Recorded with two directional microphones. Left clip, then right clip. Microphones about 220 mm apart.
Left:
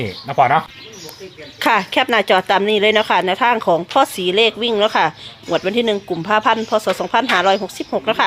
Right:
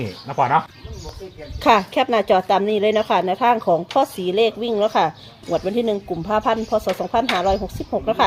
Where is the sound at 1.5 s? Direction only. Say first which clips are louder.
Left 1 dB; centre (ahead or behind).